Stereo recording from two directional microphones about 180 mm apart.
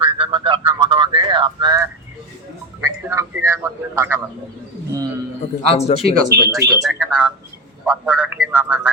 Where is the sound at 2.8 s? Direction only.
15° right (ahead or behind).